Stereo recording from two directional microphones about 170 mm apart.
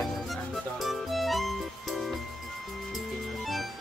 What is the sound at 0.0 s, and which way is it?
Music, centre (ahead or behind).